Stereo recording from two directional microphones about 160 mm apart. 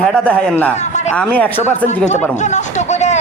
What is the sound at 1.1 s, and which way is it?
Speech, 10° left (ahead or behind).